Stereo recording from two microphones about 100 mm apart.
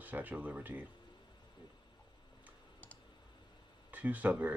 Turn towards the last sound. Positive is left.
turn(degrees=-15)  # may be behind; listen again after turning